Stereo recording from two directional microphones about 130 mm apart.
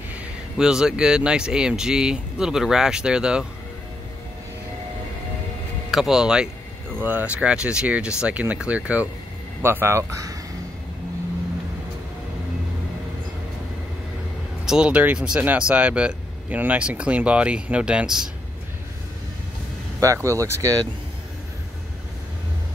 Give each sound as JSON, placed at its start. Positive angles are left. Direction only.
{"t": 0.1, "sound": "speech", "side_deg": -5}
{"t": 5.9, "sound": "speech", "side_deg": -5}
{"t": 14.7, "sound": "speech", "side_deg": -10}
{"t": 20.0, "sound": "speech", "side_deg": -25}